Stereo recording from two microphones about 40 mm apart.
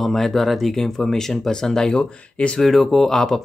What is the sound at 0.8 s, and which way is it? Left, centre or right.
Speech, centre.